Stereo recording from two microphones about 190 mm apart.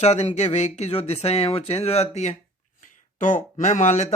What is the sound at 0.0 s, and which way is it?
Speech, 35° left (ahead or behind).